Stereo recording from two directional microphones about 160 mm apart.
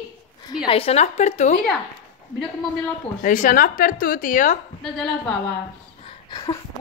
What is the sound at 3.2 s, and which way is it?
A woman's voice, 55° left (ahead or behind).